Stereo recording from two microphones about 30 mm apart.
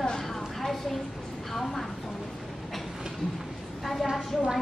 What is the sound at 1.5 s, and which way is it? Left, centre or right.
Speech, centre.